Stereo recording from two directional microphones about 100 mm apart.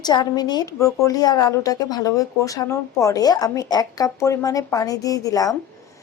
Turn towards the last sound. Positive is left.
turn(degrees=35)  # may be behind; listen again after turning